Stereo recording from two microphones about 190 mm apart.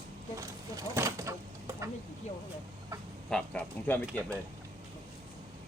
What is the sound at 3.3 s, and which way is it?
Speech, 5° left (ahead or behind).